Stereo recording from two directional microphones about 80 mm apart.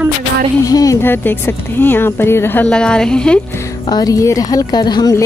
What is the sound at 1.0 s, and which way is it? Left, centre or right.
Speech, left.